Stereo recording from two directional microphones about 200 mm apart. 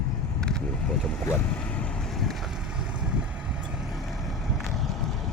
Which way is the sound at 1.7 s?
Centre (ahead or behind).